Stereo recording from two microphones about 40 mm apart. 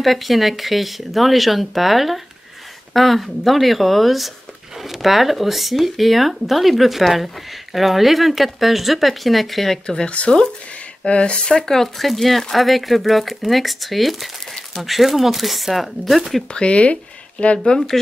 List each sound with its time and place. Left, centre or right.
0.0 s speech: centre
9.8 s speech: left
11.6 s speech: centre
16.5 s speech: left
17.7 s speech: centre